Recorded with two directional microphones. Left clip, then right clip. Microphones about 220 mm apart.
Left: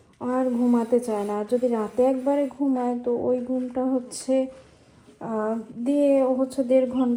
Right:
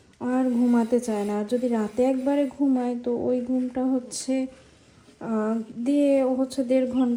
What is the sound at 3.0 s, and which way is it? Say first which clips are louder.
Speech: left 1 dB; 20° right (ahead or behind).